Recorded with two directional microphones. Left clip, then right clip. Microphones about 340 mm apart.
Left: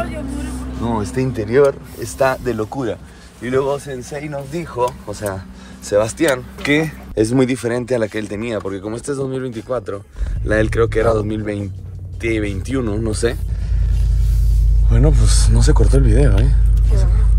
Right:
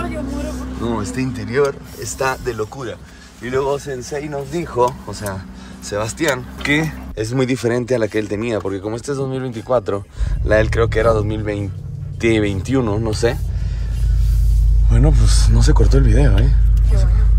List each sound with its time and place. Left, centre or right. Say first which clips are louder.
0.7 s speech: left 3 dB; centre
3.4 s speech: left 1 dB; centre
5.0 s speech: left 3 dB; centre
14.9 s speech: left 1 dB; centre